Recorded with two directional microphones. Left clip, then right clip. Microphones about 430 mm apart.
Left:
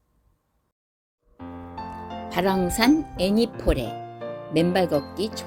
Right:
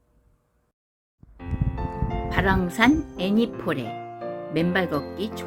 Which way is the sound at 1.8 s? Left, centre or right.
Centre.